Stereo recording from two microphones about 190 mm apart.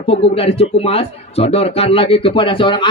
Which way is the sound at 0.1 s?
30° left (ahead or behind).